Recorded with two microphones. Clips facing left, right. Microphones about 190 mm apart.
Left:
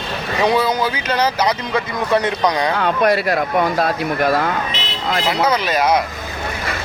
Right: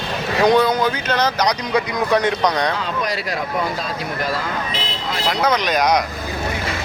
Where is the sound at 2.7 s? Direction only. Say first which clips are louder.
Left 7 dB; 60° left (ahead or behind).